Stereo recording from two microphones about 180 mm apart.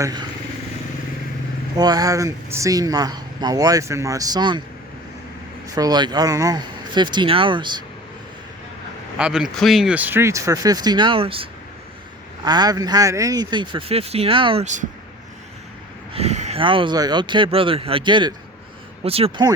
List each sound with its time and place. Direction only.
0.0 s speech: 25° right (ahead or behind)
1.7 s speech: 20° right (ahead or behind)
5.7 s speech: 20° right (ahead or behind)
9.1 s speech: 5° right (ahead or behind); by 11.4 s 30° right (ahead or behind)
12.5 s speech: 20° right (ahead or behind); by 14.8 s 40° right (ahead or behind)
16.1 s speech: 35° right (ahead or behind)